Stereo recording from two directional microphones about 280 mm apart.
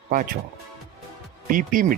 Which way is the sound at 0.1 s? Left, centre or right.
Right.